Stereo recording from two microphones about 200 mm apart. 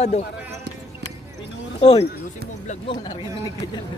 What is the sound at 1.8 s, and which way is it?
Speech, 30° left (ahead or behind).